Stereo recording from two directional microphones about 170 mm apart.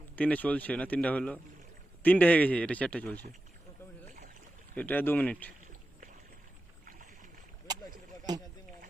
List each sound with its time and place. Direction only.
0.2 s speech: 10° left (ahead or behind)
4.7 s speech: 10° left (ahead or behind)
6.8 s boat: 50° right (ahead or behind)
8.3 s speech: 25° right (ahead or behind)